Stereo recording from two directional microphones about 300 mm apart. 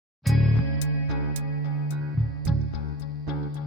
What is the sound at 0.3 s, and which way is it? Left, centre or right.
Music, centre.